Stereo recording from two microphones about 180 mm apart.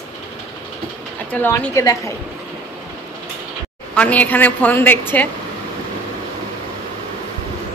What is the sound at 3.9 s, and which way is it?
A woman's voice, 10° left (ahead or behind).